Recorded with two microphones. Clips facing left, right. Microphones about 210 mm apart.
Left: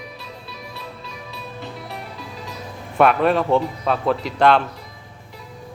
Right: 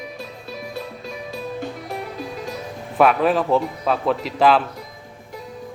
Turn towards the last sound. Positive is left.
turn(degrees=0)  # may be behind; listen again after turning